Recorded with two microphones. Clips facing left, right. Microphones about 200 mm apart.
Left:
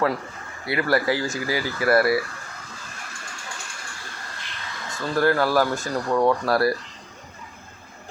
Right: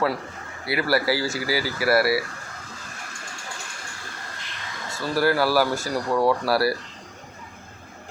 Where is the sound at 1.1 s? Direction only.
30° right (ahead or behind).